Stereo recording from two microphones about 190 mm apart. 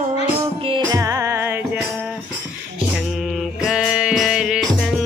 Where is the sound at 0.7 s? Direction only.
20° right (ahead or behind).